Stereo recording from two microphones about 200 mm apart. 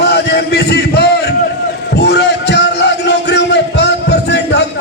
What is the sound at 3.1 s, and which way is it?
Music, 60° left (ahead or behind).